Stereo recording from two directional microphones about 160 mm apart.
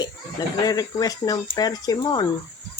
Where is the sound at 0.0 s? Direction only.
25° left (ahead or behind).